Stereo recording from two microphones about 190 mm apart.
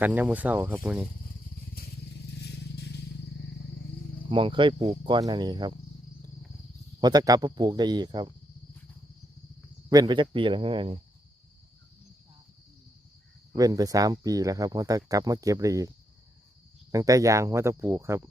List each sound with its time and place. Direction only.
0.0 s speech: 10° right (ahead or behind)
1.2 s vehicle: 55° left (ahead or behind)
4.3 s speech: 25° right (ahead or behind)
7.0 s speech: 20° right (ahead or behind)
9.9 s speech: 20° right (ahead or behind)
13.5 s speech: 20° right (ahead or behind)
16.9 s speech: 20° right (ahead or behind)